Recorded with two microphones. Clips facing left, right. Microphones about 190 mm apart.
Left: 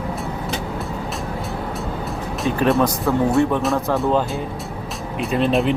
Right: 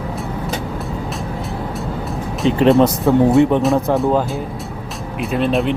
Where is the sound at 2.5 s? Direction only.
20° right (ahead or behind).